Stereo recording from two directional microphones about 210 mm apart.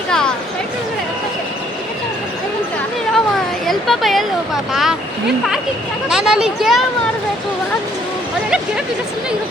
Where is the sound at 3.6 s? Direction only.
Centre (ahead or behind).